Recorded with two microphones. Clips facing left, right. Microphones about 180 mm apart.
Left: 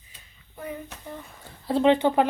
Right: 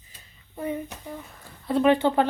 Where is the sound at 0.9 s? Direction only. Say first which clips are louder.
Right 1 dB; 10° right (ahead or behind).